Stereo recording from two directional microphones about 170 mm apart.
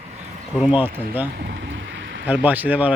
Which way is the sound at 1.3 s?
90° right.